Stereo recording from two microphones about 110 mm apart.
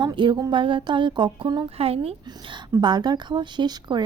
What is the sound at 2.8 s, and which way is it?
Speech, 40° right (ahead or behind).